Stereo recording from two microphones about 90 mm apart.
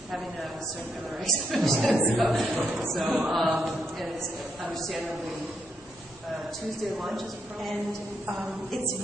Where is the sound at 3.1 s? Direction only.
Centre (ahead or behind).